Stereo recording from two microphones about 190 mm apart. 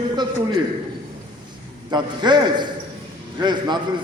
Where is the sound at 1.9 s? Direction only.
25° right (ahead or behind).